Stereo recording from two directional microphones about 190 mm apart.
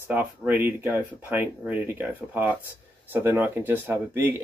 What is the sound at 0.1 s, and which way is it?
Speech, 10° right (ahead or behind).